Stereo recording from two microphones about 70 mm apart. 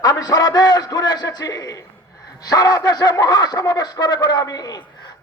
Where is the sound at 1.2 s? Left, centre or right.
Left.